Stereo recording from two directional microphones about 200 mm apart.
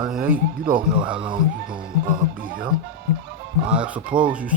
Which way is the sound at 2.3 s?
45° right (ahead or behind).